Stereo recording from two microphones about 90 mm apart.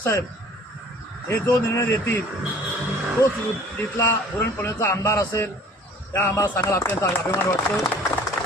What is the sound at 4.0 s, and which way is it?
A man's voice, 25° left (ahead or behind).